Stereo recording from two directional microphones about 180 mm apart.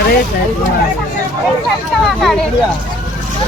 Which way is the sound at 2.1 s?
Centre (ahead or behind).